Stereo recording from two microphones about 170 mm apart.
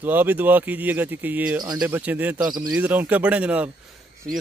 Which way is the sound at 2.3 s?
25° right (ahead or behind).